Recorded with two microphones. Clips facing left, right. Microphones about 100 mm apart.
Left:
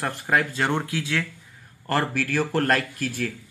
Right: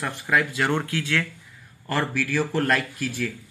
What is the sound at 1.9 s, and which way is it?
Speech, 50° left (ahead or behind).